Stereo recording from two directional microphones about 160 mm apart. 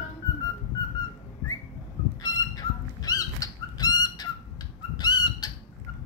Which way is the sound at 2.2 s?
25° left (ahead or behind).